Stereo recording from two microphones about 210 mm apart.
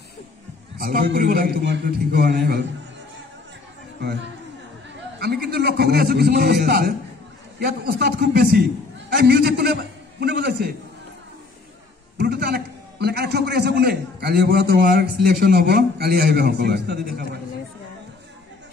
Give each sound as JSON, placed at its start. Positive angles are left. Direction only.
{"t": 0.7, "sound": "a man's voice", "side_deg": -45}
{"t": 4.0, "sound": "a man's voice", "side_deg": -55}
{"t": 12.2, "sound": "a man's voice", "side_deg": -50}